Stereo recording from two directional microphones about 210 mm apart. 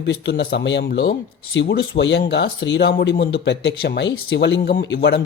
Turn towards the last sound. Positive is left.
turn(degrees=55)  # may be behind; listen again after turning